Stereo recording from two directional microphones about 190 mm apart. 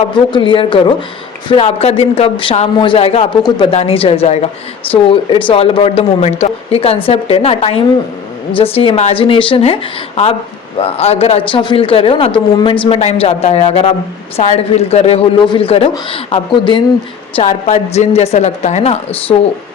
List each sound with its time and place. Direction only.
0.3 s a man's voice: 25° left (ahead or behind)
10.8 s a man's voice: 30° left (ahead or behind)
17.4 s speech: 40° left (ahead or behind)